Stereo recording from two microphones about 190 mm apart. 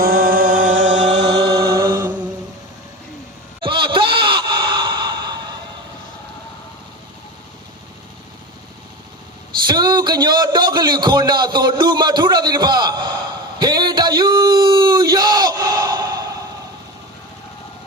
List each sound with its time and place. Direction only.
0.0 s music: 50° right (ahead or behind)
1.1 s chant: 65° right (ahead or behind)
1.7 s chant: 15° right (ahead or behind)
3.6 s sigh: 25° right (ahead or behind)
9.6 s a man's voice: 20° right (ahead or behind)
13.6 s a sound: 20° right (ahead or behind)